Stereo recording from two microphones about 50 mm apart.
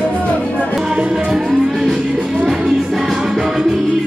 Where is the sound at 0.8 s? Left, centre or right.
Centre.